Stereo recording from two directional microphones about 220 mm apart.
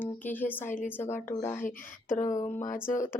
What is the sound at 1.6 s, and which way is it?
Speech, 35° left (ahead or behind).